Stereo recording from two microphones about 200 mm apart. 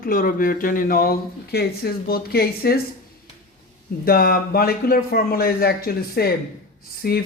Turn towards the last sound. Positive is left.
turn(degrees=50)  # may be behind; listen again after turning